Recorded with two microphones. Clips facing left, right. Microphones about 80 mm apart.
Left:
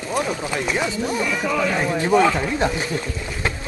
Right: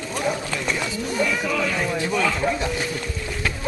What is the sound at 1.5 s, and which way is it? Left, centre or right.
Speech, left.